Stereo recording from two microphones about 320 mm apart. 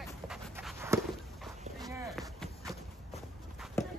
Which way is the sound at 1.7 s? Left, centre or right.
Centre.